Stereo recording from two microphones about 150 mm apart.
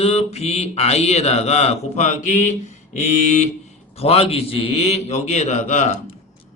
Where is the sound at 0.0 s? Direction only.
45° left (ahead or behind).